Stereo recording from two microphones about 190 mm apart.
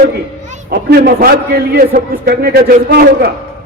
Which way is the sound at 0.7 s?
55° right (ahead or behind).